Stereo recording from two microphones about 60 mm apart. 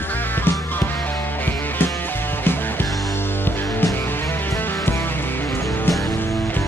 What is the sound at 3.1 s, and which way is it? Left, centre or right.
Music, left.